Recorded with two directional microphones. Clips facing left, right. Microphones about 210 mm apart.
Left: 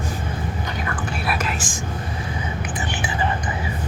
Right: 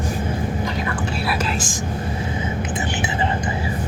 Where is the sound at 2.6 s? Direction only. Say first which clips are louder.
Right 3 dB; 25° right (ahead or behind).